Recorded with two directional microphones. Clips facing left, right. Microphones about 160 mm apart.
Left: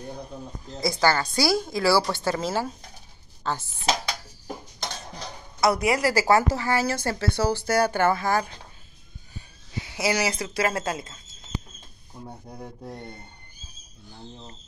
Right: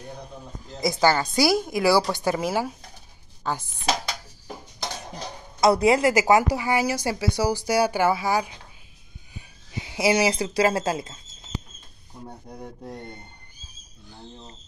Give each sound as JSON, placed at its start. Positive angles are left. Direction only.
{"t": 0.7, "sound": "speech", "side_deg": -15}
{"t": 5.2, "sound": "speech", "side_deg": -25}
{"t": 12.3, "sound": "rub", "side_deg": 5}